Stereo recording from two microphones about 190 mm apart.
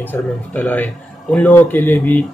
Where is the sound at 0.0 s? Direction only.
10° left (ahead or behind).